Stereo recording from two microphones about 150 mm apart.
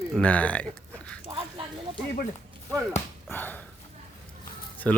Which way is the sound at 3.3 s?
10° left (ahead or behind).